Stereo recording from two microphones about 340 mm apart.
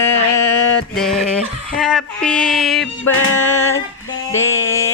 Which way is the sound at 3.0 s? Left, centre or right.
Left.